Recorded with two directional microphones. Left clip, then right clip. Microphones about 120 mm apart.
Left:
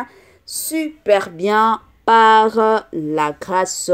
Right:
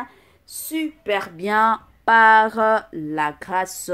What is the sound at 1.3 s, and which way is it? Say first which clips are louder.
Speech: left 3 dB; 25° left (ahead or behind).